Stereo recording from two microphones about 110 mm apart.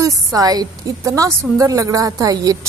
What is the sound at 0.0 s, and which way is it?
Speech, 30° right (ahead or behind).